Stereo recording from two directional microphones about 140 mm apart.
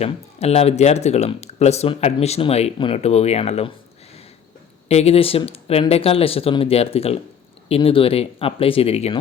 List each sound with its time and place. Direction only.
0.0 s speech: 50° left (ahead or behind)
4.9 s speech: 50° left (ahead or behind)